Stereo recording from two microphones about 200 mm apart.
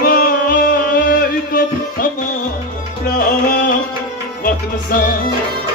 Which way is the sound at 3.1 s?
45° left (ahead or behind).